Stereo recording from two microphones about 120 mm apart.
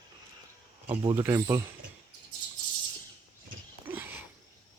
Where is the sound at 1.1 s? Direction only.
25° right (ahead or behind).